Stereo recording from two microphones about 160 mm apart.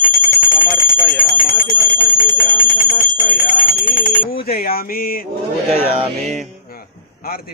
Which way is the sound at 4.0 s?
65° left (ahead or behind).